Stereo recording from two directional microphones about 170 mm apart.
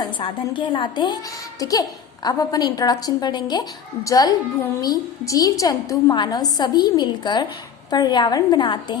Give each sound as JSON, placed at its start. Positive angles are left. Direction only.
{"t": 0.0, "sound": "a woman's voice", "side_deg": 30}